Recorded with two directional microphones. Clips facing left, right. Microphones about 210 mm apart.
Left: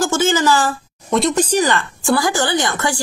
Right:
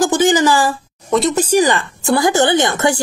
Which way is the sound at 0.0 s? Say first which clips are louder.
Right 3 dB; 15° right (ahead or behind).